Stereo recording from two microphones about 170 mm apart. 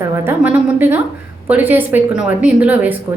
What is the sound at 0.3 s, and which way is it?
A woman's voice, 10° right (ahead or behind).